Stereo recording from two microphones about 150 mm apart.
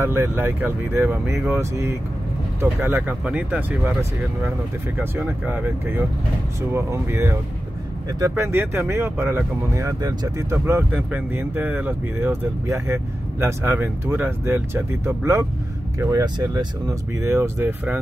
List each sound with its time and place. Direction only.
0.0 s speech: 15° right (ahead or behind)
2.8 s speech: 10° right (ahead or behind)